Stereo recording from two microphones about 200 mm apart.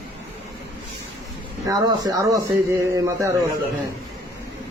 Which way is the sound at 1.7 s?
20° right (ahead or behind).